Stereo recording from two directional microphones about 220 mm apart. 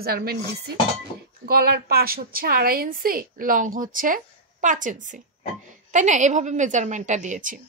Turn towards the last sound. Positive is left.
turn(degrees=-35)  # may be behind; listen again after turning